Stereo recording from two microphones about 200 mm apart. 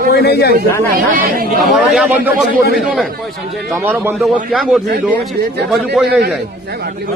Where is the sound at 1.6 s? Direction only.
Centre (ahead or behind).